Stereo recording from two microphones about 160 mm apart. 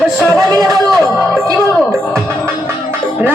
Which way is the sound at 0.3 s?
20° right (ahead or behind).